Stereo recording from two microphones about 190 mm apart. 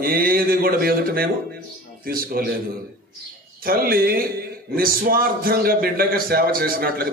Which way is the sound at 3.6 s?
50° right (ahead or behind).